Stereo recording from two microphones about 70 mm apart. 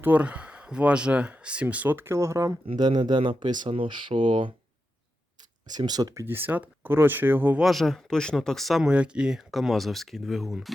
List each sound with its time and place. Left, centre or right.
0.0 s speech: right
2.7 s speech: right
5.6 s speech: right
6.2 s speech: right
7.6 s speech: centre
8.8 s speech: centre